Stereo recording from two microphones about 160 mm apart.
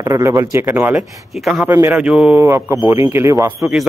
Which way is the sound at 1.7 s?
15° right (ahead or behind).